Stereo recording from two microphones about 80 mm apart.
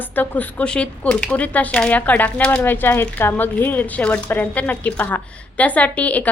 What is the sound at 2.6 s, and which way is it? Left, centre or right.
A woman's voice, left.